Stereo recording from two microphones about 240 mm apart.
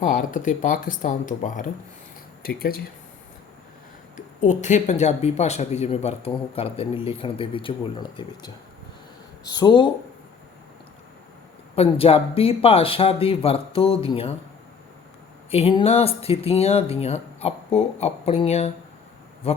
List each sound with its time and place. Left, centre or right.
0.0 s speech: left
4.4 s speech: left
11.8 s speech: left
15.4 s speech: left